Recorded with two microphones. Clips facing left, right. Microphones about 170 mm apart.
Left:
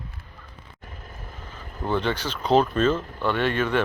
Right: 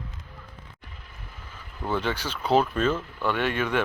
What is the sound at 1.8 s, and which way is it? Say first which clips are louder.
Speech: left 3 dB; 10° right (ahead or behind).